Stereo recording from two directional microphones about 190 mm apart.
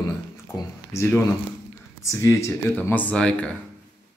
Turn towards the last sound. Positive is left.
turn(degrees=5)  # may be behind; listen again after turning